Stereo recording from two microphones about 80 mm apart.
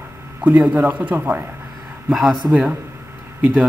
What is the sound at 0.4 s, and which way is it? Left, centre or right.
Speech, right.